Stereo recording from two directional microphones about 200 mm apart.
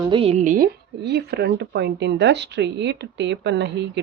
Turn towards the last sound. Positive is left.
turn(degrees=-60)  # may be behind; listen again after turning